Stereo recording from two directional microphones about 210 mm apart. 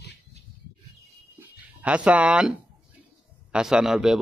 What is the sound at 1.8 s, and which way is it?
Speech, 5° right (ahead or behind).